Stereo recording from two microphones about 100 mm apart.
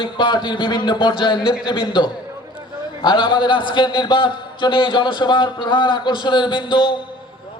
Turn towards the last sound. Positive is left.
turn(degrees=50)  # may be behind; listen again after turning